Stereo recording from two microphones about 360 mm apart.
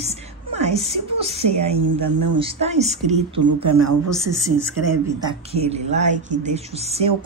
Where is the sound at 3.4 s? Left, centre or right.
Right.